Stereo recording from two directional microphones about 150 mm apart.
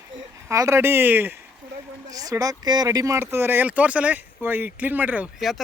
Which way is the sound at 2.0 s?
25° right (ahead or behind).